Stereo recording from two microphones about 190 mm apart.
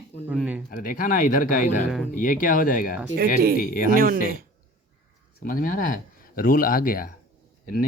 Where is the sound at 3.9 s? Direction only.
50° right (ahead or behind).